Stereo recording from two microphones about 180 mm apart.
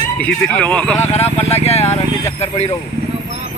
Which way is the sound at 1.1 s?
35° left (ahead or behind).